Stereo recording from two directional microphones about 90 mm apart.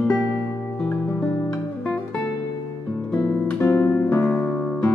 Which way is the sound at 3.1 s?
25° left (ahead or behind).